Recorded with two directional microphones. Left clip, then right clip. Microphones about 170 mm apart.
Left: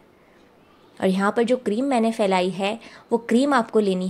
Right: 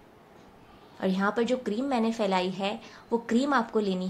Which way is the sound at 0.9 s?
50° left (ahead or behind).